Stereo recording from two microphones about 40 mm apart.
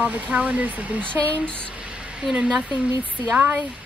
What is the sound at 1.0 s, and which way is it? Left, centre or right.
Speech, left.